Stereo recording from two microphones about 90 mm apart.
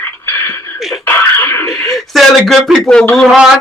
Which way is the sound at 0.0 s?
25° left (ahead or behind).